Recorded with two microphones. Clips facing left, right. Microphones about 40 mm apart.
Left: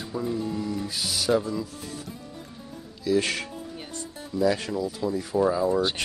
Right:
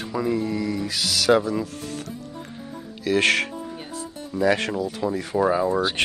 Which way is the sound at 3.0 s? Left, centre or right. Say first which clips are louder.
Right 5 dB; right.